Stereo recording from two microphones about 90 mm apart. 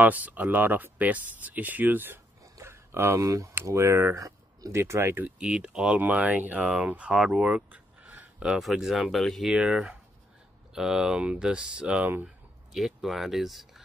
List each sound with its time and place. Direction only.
0.0 s speech: 20° right (ahead or behind)
2.5 s a sound: 30° right (ahead or behind)
3.6 s speech: 30° right (ahead or behind)
5.4 s speech: 10° right (ahead or behind)
5.9 s speech: 20° right (ahead or behind); by 13.8 s centre (ahead or behind)